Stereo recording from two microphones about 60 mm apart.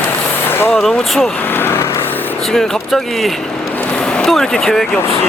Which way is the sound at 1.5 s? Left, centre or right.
Left.